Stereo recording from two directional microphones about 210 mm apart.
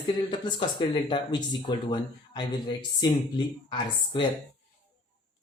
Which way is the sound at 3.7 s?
20° left (ahead or behind).